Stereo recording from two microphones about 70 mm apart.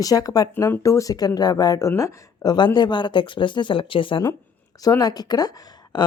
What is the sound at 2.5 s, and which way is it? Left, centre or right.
Speech, left.